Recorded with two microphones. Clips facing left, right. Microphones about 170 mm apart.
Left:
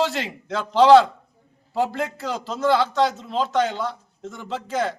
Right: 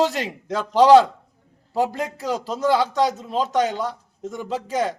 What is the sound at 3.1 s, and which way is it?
Speech, 40° right (ahead or behind).